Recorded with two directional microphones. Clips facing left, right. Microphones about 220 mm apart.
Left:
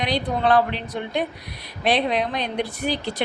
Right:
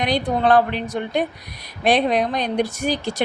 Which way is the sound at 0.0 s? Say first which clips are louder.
Right 3 dB; 50° right (ahead or behind).